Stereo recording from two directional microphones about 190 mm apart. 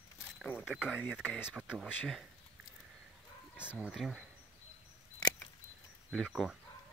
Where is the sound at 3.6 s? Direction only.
5° right (ahead or behind).